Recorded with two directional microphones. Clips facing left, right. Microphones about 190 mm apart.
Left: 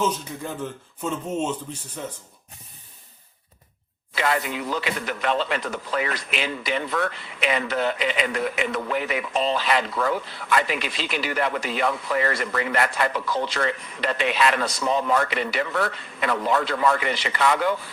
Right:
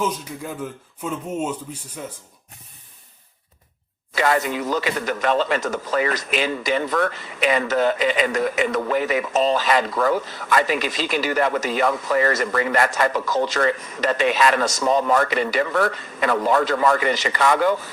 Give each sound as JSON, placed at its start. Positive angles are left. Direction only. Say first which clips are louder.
{"t": 0.0, "sound": "speech", "louder": "even", "side_deg": -10}
{"t": 4.1, "sound": "speech", "louder": "right 4 dB", "side_deg": -45}